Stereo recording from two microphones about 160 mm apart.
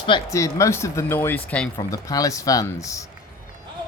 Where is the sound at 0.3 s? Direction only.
20° left (ahead or behind).